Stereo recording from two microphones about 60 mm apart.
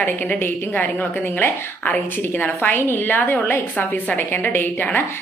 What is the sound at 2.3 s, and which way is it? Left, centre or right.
A woman's voice, left.